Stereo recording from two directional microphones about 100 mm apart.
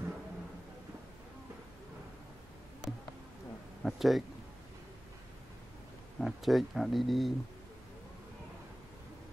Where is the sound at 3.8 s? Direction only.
Centre (ahead or behind).